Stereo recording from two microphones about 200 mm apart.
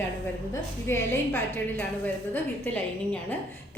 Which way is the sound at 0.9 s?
10° left (ahead or behind).